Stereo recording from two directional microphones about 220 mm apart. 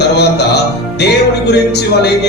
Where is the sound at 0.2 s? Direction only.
50° left (ahead or behind).